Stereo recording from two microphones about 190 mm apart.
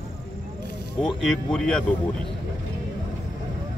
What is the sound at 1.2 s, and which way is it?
Speech, 5° left (ahead or behind).